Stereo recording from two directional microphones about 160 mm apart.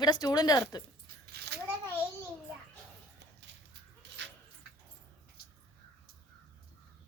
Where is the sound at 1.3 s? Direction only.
90° right.